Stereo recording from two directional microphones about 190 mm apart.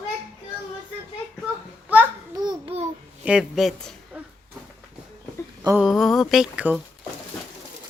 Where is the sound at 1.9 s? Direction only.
10° right (ahead or behind).